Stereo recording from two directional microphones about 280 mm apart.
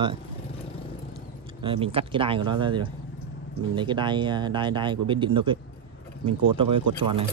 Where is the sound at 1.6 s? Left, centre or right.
Centre.